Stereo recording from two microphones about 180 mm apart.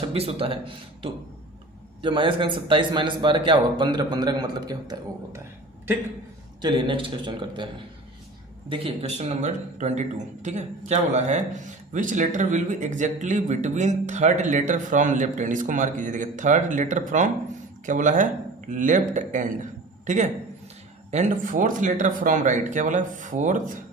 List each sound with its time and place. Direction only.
0.1 s a man's voice: 30° right (ahead or behind)
6.6 s a man's voice: 25° right (ahead or behind)
8.7 s a man's voice: 30° right (ahead or behind)